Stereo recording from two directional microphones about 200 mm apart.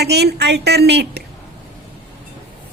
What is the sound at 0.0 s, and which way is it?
A woman's voice, 55° right (ahead or behind).